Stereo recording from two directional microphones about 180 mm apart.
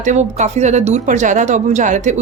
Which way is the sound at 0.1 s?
40° right (ahead or behind).